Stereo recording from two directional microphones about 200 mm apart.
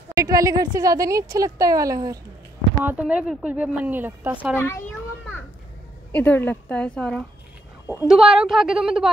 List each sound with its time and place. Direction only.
0.1 s speech: 15° right (ahead or behind)
4.6 s a child's voice: 10° left (ahead or behind)
6.1 s a woman's voice: 10° left (ahead or behind)